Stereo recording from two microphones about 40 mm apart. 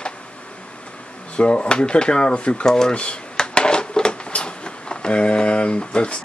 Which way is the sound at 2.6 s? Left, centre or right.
Centre.